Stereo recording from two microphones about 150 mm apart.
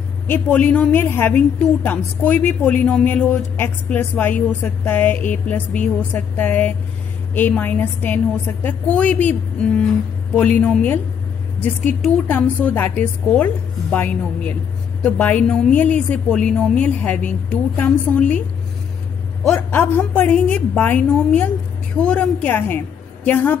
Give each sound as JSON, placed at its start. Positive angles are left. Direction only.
{"t": 0.3, "sound": "a woman's voice", "side_deg": 10}
{"t": 12.0, "sound": "a woman's voice", "side_deg": 10}
{"t": 19.5, "sound": "a woman's voice", "side_deg": 15}